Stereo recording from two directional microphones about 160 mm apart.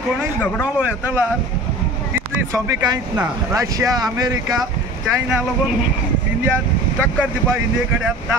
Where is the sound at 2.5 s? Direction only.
20° right (ahead or behind).